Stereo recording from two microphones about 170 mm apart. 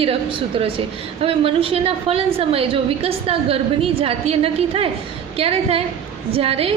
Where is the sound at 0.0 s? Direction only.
35° right (ahead or behind).